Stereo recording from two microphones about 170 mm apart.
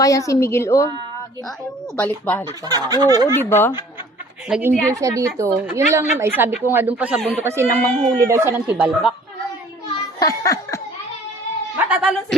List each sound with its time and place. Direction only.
0.0 s a woman's voice: 20° left (ahead or behind)
2.0 s a woman's voice: 10° left (ahead or behind)
2.6 s speech: 25° right (ahead or behind)
3.3 s a woman's voice: 15° left (ahead or behind)
4.4 s a woman's voice: 5° right (ahead or behind)
4.9 s speech: 20° right (ahead or behind)
7.4 s speech: 15° right (ahead or behind)
7.8 s a woman's voice: 5° left (ahead or behind)
8.3 s speech: 15° right (ahead or behind)
9.9 s laughter: 20° left (ahead or behind)
11.9 s speech: 5° right (ahead or behind)